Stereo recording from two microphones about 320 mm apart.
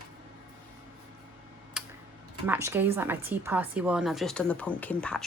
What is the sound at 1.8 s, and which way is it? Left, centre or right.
Tick-tock, centre.